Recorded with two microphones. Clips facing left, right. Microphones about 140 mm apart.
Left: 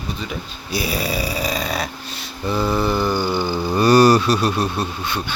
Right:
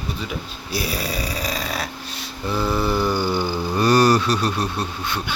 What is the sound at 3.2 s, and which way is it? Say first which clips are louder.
Speech: left 1 dB; 15° left (ahead or behind).